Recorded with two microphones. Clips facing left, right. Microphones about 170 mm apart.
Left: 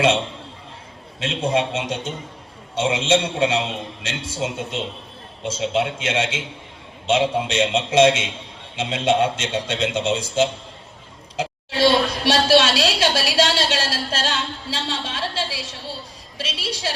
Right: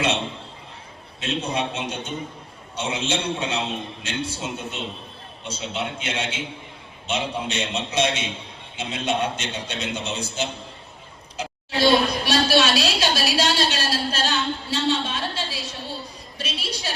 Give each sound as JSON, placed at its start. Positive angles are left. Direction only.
{"t": 1.2, "sound": "a man's voice", "side_deg": 90}